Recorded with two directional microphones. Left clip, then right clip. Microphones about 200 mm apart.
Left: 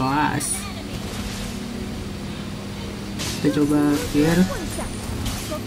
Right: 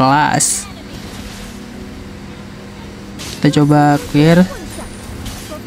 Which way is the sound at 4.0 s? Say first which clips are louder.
Right 8 dB; centre (ahead or behind).